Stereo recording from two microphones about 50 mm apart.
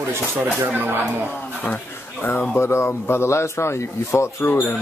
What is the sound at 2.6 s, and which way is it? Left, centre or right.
A man's voice, left.